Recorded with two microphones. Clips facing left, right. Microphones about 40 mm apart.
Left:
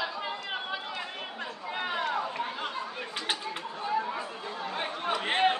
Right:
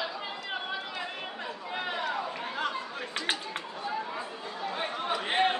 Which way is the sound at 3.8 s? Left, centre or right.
Centre.